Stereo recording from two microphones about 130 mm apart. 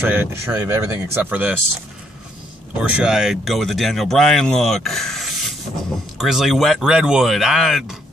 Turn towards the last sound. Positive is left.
turn(degrees=0)  # may be behind; listen again after turning